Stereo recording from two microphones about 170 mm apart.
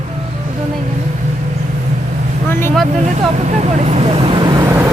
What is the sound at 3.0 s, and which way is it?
Speech, 45° right (ahead or behind).